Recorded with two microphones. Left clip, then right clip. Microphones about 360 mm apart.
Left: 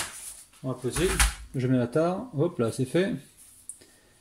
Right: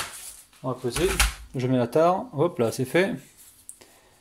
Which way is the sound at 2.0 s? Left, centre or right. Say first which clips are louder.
Right 6 dB; right.